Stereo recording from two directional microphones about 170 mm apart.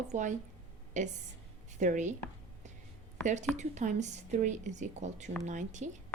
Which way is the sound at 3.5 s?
45° right (ahead or behind).